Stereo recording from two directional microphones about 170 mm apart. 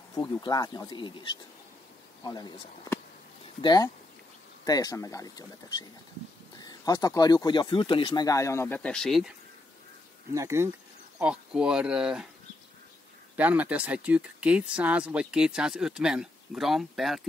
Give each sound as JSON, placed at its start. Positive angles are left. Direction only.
{"t": 0.1, "sound": "speech", "side_deg": 25}
{"t": 10.3, "sound": "speech", "side_deg": -15}
{"t": 11.1, "sound": "speech", "side_deg": -5}
{"t": 13.4, "sound": "speech", "side_deg": -10}